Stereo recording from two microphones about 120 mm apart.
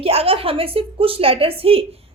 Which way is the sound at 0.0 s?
55° right (ahead or behind).